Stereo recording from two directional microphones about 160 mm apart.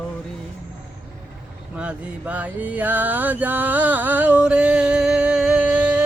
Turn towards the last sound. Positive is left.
turn(degrees=-5)  # may be behind; listen again after turning